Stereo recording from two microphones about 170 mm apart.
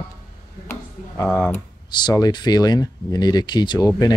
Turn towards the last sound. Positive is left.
turn(degrees=20)  # may be behind; listen again after turning